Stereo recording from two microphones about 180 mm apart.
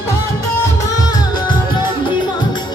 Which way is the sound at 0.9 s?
20° left (ahead or behind).